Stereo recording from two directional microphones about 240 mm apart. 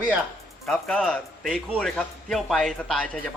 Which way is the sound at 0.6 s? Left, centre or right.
Centre.